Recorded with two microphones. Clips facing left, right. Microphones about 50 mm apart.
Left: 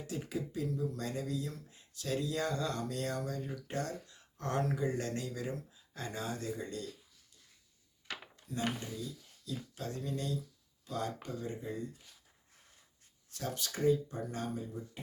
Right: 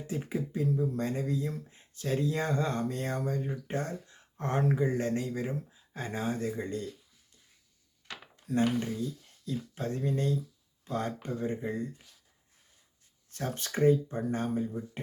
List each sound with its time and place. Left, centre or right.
0.1 s speech: right
8.4 s speech: right
13.3 s speech: right